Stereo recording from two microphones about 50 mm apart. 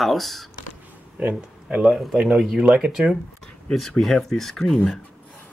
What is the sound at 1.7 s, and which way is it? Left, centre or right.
Speech, right.